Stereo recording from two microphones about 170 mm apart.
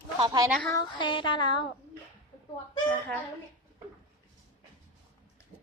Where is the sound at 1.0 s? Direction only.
30° left (ahead or behind).